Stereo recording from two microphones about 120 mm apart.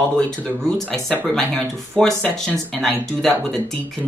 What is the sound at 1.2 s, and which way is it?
Speech, 5° left (ahead or behind).